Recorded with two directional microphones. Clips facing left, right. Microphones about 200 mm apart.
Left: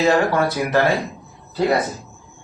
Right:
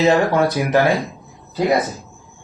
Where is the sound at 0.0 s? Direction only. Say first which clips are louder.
Right 2 dB; 20° right (ahead or behind).